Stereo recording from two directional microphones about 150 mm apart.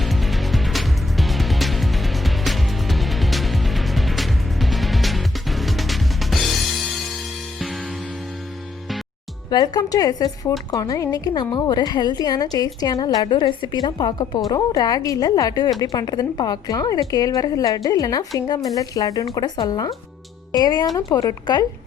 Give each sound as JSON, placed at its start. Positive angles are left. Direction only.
{"t": 0.0, "sound": "music", "side_deg": 0}
{"t": 9.5, "sound": "a woman's voice", "side_deg": 25}